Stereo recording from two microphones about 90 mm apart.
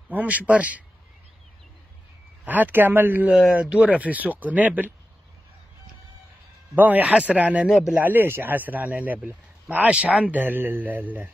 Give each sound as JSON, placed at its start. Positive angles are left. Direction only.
{"t": 0.1, "sound": "speech", "side_deg": -15}
{"t": 2.4, "sound": "a man's voice", "side_deg": -20}
{"t": 3.3, "sound": "speech", "side_deg": 0}
{"t": 3.5, "sound": "speech", "side_deg": -15}
{"t": 6.7, "sound": "speech", "side_deg": -20}
{"t": 7.7, "sound": "speech", "side_deg": -5}
{"t": 8.0, "sound": "a man's voice", "side_deg": -20}